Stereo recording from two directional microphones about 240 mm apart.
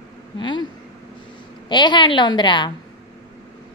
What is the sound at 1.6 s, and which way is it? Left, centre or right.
Speech, centre.